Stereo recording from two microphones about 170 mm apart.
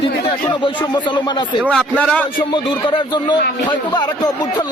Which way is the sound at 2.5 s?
25° left (ahead or behind).